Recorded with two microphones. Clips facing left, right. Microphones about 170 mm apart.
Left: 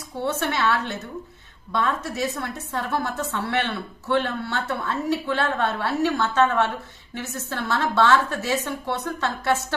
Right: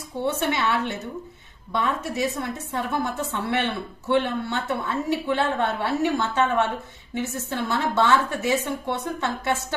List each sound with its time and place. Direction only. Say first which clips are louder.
0.2 s a woman's voice: even; 15° right (ahead or behind)
4.1 s a woman's voice: right 1 dB; 15° right (ahead or behind)